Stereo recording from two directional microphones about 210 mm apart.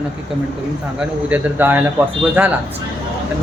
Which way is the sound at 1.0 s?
5° right (ahead or behind).